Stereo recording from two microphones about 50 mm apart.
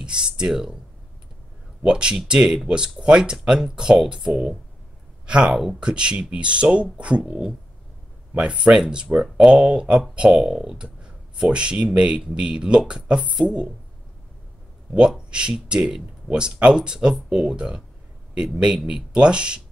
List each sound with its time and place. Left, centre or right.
0.0 s speech: centre
1.8 s speech: centre
5.2 s a sound: centre
5.5 s speech: centre
5.8 s speech: centre
8.4 s speech: centre
10.8 s a sound: centre
11.5 s speech: right
15.0 s speech: centre